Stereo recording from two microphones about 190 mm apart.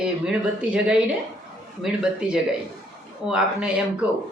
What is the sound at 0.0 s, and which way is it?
Speech, 5° right (ahead or behind).